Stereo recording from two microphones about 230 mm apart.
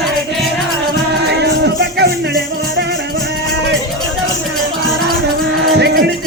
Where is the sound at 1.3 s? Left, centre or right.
Right.